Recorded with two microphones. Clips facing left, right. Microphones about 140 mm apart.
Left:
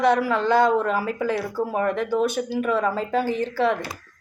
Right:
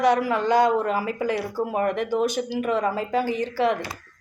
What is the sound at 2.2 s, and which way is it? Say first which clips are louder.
Speech: left 1 dB; 50° left (ahead or behind).